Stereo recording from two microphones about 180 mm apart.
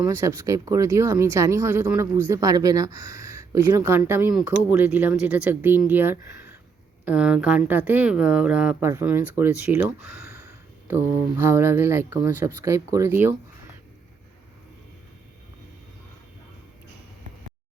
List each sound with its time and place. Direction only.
0.0 s speech: 15° right (ahead or behind)
11.4 s speech: 15° right (ahead or behind)